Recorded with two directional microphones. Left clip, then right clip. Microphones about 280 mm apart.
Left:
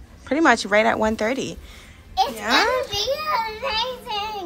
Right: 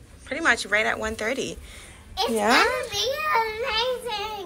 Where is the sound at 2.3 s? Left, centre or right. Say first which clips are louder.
Right 2 dB; centre.